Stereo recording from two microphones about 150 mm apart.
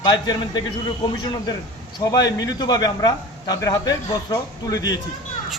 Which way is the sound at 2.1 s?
25° left (ahead or behind).